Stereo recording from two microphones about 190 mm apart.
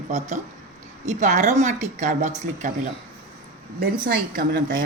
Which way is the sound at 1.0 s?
40° right (ahead or behind).